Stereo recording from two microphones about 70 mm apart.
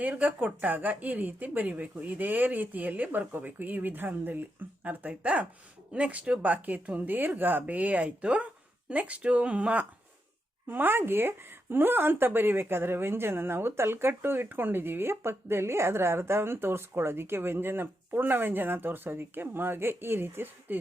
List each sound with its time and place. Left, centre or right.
0.0 s speech: right